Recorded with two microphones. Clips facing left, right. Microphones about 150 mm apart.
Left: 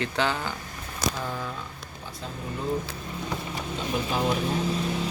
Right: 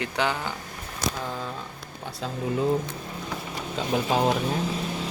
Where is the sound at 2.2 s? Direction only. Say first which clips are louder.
Right 6 dB; 90° right.